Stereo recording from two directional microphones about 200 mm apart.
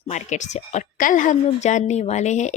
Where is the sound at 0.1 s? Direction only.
35° left (ahead or behind).